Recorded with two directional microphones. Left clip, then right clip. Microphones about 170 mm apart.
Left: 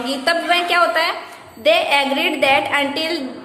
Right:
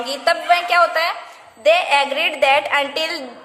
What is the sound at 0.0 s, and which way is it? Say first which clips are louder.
A woman's voice: even; 45° right (ahead or behind).